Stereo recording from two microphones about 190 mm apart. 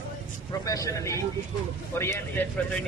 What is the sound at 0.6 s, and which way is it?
A man's voice, 15° left (ahead or behind).